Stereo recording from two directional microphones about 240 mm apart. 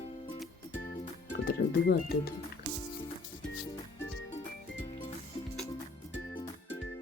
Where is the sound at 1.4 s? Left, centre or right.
Left.